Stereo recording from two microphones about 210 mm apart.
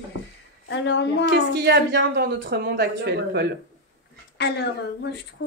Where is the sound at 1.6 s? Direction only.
55° right (ahead or behind).